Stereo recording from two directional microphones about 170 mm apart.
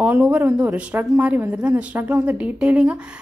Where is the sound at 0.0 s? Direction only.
10° right (ahead or behind).